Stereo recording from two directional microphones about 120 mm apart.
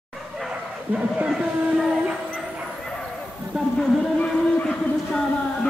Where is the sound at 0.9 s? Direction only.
10° right (ahead or behind).